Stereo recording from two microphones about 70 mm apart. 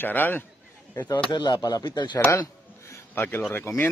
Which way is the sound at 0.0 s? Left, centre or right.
Left.